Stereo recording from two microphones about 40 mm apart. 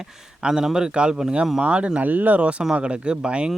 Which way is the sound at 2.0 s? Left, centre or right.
Right.